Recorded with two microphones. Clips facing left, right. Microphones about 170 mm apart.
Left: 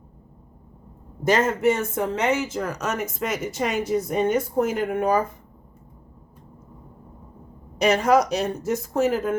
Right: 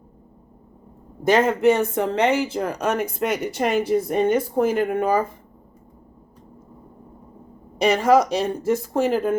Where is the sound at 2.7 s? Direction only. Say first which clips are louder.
Right 4 dB; 55° right (ahead or behind).